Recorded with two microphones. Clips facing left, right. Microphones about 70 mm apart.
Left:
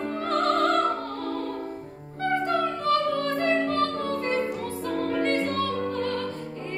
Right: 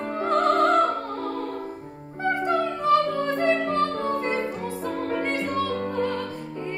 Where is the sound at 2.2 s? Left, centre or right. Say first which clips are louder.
Right 1 dB; centre.